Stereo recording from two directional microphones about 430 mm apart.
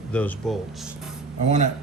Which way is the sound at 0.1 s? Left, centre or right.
Centre.